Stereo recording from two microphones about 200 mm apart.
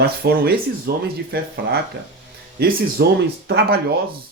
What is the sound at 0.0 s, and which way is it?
Speech, 50° right (ahead or behind).